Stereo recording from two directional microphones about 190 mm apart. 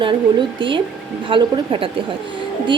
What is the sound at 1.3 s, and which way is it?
Speech, 25° right (ahead or behind).